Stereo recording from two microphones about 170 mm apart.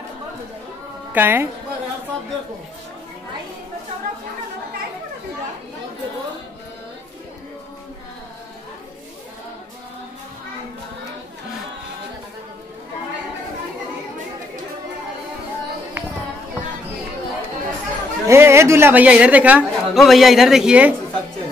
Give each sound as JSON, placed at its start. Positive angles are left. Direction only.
{"t": 1.1, "sound": "speech", "side_deg": -10}
{"t": 18.2, "sound": "speech", "side_deg": -15}